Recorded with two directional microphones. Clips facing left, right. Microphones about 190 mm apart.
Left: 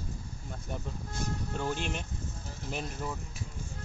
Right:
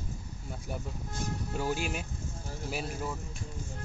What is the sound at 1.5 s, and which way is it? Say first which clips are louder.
A man's voice: right 3 dB; 10° right (ahead or behind).